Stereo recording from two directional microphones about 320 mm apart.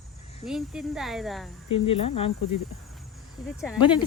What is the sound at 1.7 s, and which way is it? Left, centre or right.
Speech, centre.